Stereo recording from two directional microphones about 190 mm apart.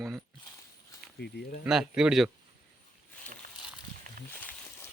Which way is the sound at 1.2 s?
60° left (ahead or behind).